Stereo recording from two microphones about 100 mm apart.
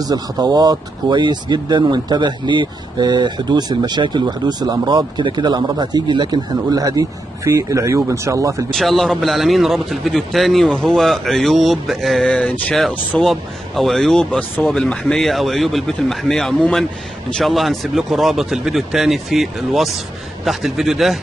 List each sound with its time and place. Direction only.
0.0 s speech: 40° right (ahead or behind)
8.7 s a man's voice: centre (ahead or behind)